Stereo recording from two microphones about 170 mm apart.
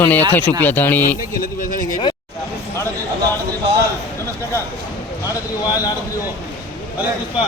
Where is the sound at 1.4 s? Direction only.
55° left (ahead or behind).